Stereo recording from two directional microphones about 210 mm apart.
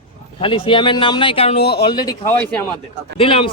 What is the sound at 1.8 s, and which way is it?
Speech, 20° left (ahead or behind).